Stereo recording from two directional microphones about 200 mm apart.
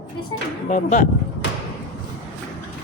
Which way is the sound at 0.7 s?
40° left (ahead or behind).